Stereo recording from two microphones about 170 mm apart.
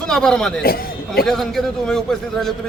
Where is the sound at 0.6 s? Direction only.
60° left (ahead or behind).